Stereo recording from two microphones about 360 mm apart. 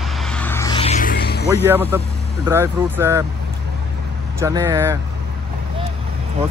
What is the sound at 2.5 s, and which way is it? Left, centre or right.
Speech, centre.